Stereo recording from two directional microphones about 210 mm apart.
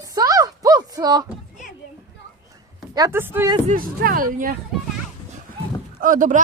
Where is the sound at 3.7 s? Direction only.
40° right (ahead or behind).